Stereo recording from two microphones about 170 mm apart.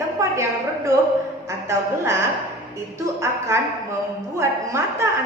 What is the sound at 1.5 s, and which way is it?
A woman's voice, 15° right (ahead or behind).